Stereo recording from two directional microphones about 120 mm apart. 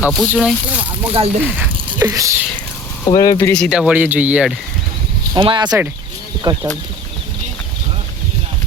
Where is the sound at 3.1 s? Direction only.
30° left (ahead or behind).